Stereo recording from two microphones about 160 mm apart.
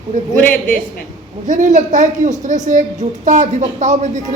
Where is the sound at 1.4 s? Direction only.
50° right (ahead or behind).